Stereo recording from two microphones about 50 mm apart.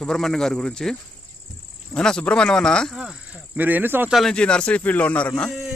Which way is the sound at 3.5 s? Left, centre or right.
Right.